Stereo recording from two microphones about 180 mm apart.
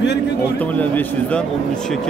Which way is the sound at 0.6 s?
10° left (ahead or behind).